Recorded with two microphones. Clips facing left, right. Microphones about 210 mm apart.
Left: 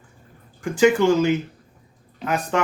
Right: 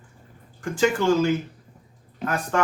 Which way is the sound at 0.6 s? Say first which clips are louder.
Left 5 dB; 15° left (ahead or behind).